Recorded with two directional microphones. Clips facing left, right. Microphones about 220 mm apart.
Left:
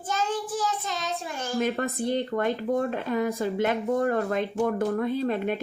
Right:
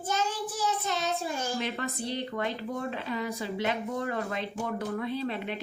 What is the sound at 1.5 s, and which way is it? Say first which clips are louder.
A woman's voice: left 6 dB; 50° left (ahead or behind).